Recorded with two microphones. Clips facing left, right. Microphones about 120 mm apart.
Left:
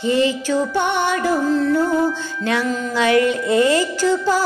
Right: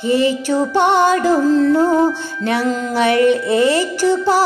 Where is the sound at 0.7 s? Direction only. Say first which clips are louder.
Right 6 dB; 90° right.